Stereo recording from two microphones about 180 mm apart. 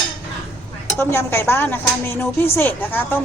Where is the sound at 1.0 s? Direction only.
15° left (ahead or behind).